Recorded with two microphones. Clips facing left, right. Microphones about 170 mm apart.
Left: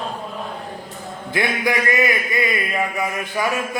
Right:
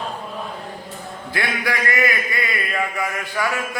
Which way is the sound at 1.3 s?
20° left (ahead or behind).